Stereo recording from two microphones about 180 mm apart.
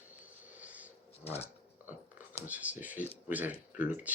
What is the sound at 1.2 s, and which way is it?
Speech, 35° left (ahead or behind).